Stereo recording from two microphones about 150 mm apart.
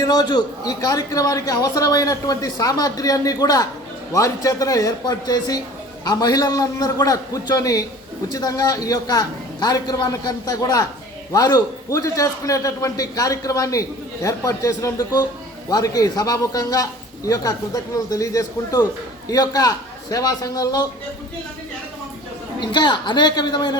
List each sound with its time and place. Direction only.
0.0 s a man's voice: 25° left (ahead or behind)
22.6 s a man's voice: 30° left (ahead or behind)